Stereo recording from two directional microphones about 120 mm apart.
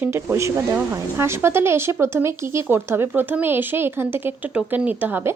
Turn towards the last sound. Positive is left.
turn(degrees=-15)  # may be behind; listen again after turning